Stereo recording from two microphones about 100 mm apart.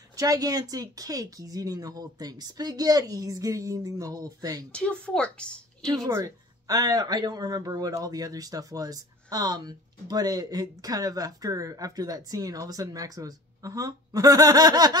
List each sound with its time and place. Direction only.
0.1 s speech: 35° right (ahead or behind)
4.7 s speech: 10° left (ahead or behind)
6.0 s speech: 25° right (ahead or behind)
6.7 s speech: 40° right (ahead or behind)